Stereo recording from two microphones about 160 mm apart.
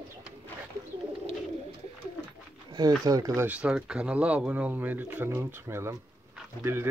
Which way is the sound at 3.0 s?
25° right (ahead or behind).